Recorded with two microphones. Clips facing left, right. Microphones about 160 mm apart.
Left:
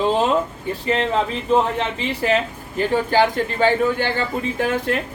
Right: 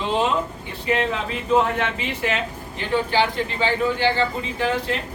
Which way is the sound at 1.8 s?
35° left (ahead or behind).